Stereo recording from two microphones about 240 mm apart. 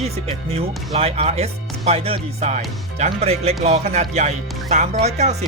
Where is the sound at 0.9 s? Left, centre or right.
Right.